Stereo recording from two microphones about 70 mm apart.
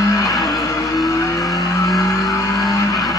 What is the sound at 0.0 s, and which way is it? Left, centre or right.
Music, left.